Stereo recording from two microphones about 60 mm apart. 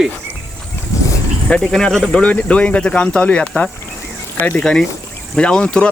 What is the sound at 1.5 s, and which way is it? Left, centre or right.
Speech, centre.